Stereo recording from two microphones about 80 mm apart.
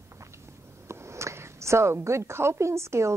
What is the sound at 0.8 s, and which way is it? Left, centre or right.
A woman's voice, right.